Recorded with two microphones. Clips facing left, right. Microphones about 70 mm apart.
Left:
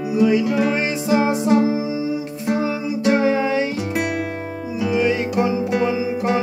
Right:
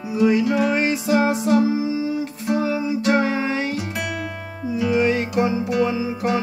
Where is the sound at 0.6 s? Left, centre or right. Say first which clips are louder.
Even; centre.